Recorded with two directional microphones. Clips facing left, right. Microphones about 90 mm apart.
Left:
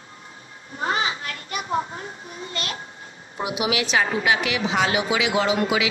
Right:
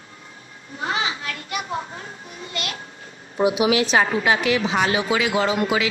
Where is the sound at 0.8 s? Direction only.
35° left (ahead or behind).